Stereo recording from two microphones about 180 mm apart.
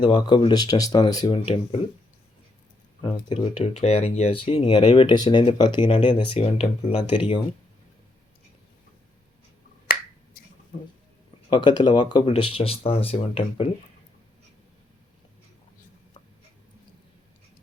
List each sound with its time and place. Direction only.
0.0 s speech: 25° left (ahead or behind)
3.0 s speech: 30° left (ahead or behind)
11.4 s speech: 25° left (ahead or behind)